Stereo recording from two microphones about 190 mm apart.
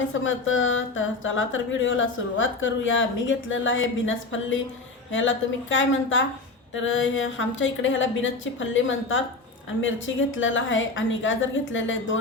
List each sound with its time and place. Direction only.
0.1 s a woman's voice: 90° left